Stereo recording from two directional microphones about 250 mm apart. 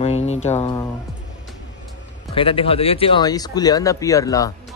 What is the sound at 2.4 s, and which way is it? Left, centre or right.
Speech, left.